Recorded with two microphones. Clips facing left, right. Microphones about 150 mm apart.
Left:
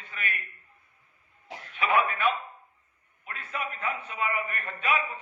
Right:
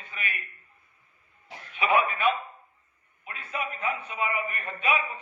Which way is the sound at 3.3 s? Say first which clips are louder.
Right 1 dB; 10° right (ahead or behind).